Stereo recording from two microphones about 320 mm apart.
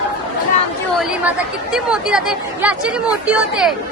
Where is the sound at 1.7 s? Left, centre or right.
Centre.